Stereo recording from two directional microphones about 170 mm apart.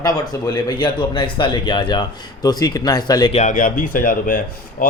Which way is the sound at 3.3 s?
45° left (ahead or behind).